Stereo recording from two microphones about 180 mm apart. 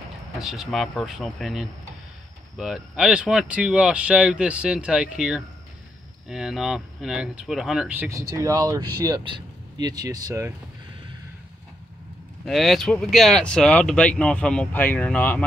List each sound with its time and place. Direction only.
0.4 s speech: centre (ahead or behind); by 10.5 s 20° right (ahead or behind)
12.4 s speech: centre (ahead or behind)